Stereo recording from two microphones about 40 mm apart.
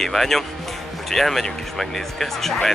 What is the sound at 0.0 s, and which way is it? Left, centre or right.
Speech, centre.